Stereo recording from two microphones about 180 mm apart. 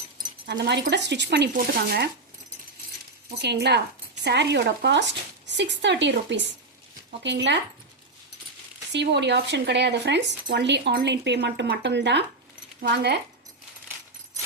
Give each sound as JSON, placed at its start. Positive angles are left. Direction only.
{"t": 0.4, "sound": "speech", "side_deg": -70}
{"t": 1.5, "sound": "speech", "side_deg": -60}
{"t": 3.3, "sound": "speech", "side_deg": -70}
{"t": 8.9, "sound": "speech", "side_deg": -70}